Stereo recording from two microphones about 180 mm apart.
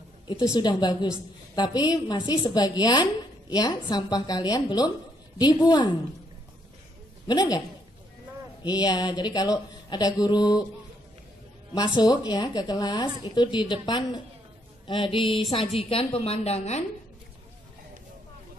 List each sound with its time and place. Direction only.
0.6 s a woman's voice: 25° left (ahead or behind)
7.2 s a woman's voice: 20° left (ahead or behind)
8.6 s a woman's voice: 20° left (ahead or behind)
11.7 s a woman's voice: 20° left (ahead or behind)
15.2 s music: centre (ahead or behind)
15.8 s a woman's voice: 30° left (ahead or behind)